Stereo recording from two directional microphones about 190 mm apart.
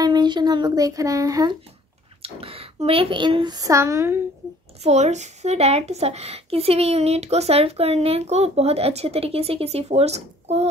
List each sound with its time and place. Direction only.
0.0 s child singing: 20° right (ahead or behind)
2.2 s speech: 30° right (ahead or behind); by 4.2 s 15° right (ahead or behind)
4.8 s speech: 35° right (ahead or behind)